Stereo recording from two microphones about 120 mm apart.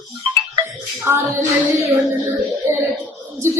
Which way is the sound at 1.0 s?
25° right (ahead or behind).